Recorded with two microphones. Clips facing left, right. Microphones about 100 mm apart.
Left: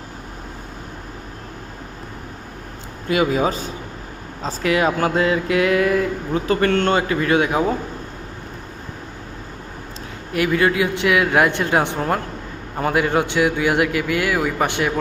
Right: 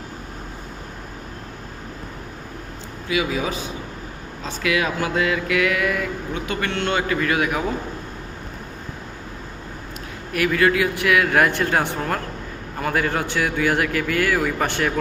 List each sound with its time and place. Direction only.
3.1 s a man's voice: 45° left (ahead or behind)
7.1 s a man's voice: 25° left (ahead or behind)
10.3 s a man's voice: 25° left (ahead or behind)